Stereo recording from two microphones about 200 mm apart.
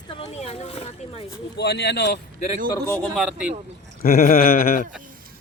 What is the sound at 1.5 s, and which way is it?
Speech, 60° left (ahead or behind).